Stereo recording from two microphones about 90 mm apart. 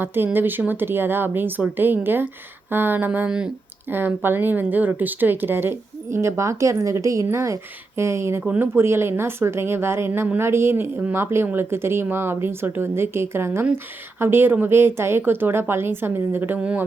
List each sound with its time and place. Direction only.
0.0 s speech: 25° right (ahead or behind)
3.2 s speech: 10° right (ahead or behind)
3.8 s speech: 25° right (ahead or behind)
16.6 s speech: 10° right (ahead or behind)